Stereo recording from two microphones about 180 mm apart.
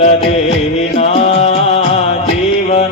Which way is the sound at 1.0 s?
35° left (ahead or behind).